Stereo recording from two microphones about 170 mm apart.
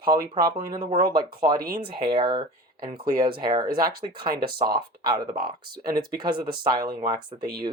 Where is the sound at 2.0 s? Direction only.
30° right (ahead or behind).